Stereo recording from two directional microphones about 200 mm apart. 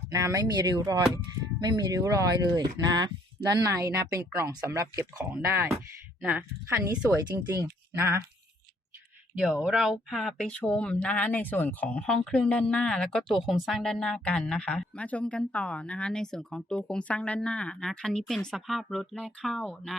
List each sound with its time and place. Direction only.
0.1 s speech: 15° right (ahead or behind)
9.4 s speech: centre (ahead or behind)